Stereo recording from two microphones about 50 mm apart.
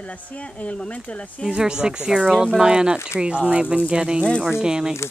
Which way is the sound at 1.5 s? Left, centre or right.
Centre.